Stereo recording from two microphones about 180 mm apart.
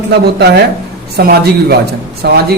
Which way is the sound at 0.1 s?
65° right (ahead or behind).